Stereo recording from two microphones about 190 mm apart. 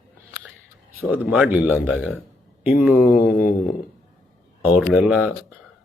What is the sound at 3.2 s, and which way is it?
Mantra, 50° left (ahead or behind).